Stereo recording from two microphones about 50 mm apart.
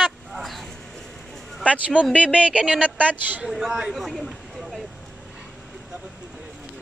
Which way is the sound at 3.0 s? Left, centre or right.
Right.